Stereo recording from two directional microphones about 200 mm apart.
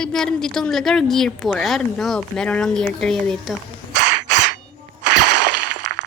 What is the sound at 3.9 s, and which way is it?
Crow, 55° right (ahead or behind).